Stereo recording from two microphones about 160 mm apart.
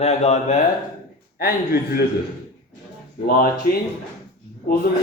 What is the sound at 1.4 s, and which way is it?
Speech, 70° left (ahead or behind).